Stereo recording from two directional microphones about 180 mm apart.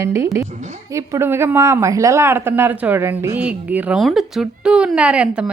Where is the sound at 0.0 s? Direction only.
15° right (ahead or behind).